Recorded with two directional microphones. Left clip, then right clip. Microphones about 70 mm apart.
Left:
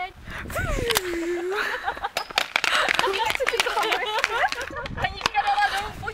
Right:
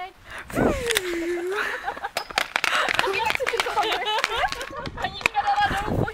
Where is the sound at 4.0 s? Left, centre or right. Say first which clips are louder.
Even; centre.